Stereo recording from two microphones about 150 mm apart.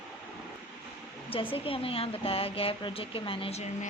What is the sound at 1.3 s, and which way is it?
Speech, 35° left (ahead or behind).